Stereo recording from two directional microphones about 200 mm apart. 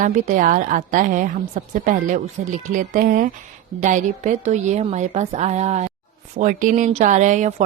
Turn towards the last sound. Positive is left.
turn(degrees=-35)  # may be behind; listen again after turning